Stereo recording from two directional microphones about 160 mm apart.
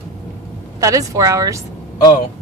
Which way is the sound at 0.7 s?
20° right (ahead or behind).